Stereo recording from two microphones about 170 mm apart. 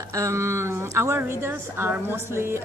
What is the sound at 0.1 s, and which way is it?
A woman's voice, 20° right (ahead or behind).